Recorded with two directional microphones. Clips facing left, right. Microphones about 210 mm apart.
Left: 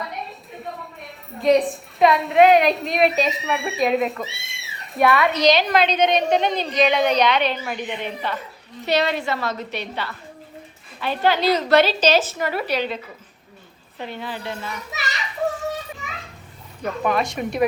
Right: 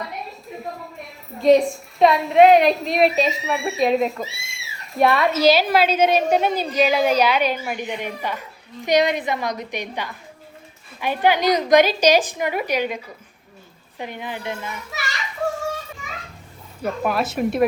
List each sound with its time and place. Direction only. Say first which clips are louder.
0.1 s a sound: even; centre (ahead or behind)
1.0 s a woman's voice: right 3 dB; centre (ahead or behind)
14.0 s a woman's voice: right 1 dB; 15° right (ahead or behind)
16.8 s a woman's voice: even; 5° right (ahead or behind)